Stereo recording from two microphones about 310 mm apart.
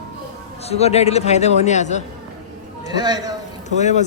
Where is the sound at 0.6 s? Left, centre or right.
Centre.